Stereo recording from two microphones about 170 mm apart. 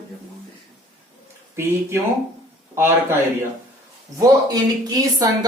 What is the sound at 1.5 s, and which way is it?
A man's voice, 15° right (ahead or behind).